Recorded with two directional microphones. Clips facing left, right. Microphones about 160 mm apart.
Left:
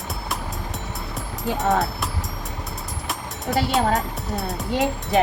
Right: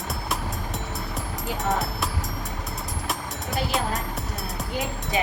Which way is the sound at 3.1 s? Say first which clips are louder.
Left 4 dB; centre (ahead or behind).